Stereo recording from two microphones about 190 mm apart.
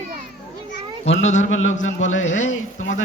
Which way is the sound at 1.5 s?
90° left.